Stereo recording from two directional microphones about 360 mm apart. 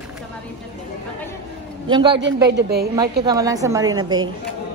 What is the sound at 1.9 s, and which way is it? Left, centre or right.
Speech, centre.